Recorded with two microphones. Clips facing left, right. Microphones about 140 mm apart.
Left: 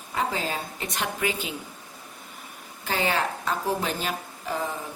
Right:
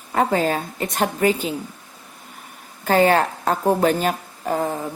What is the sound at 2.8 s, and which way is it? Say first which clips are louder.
A woman's voice: right 10 dB; 50° right (ahead or behind).